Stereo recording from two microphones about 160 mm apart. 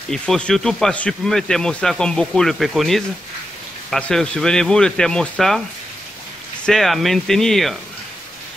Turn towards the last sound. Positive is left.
turn(degrees=0)  # may be behind; listen again after turning